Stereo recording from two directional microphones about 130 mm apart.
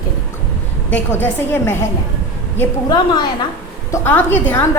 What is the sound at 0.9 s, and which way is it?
Speech, 15° left (ahead or behind).